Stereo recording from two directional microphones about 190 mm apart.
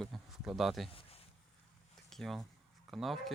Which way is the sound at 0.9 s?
30° left (ahead or behind).